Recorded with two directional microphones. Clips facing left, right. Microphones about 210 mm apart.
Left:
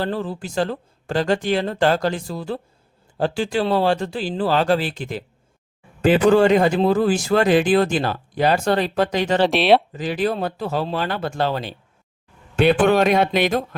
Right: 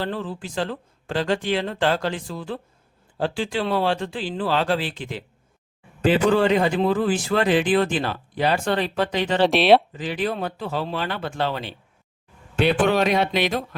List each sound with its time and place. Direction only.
0.0 s speech: 40° left (ahead or behind)
9.4 s speech: centre (ahead or behind)
9.9 s speech: 45° left (ahead or behind)